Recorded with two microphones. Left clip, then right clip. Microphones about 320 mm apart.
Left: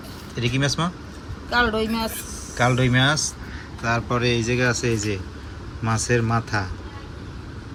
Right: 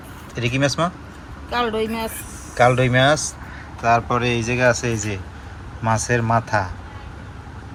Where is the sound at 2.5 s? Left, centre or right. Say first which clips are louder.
Right 5 dB; centre.